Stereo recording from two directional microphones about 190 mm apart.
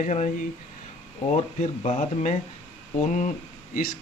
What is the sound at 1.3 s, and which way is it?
Speech, 35° left (ahead or behind).